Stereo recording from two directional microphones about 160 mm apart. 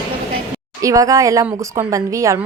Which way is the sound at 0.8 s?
20° right (ahead or behind).